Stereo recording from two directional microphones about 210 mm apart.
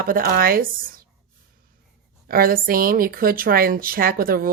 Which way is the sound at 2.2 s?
45° right (ahead or behind).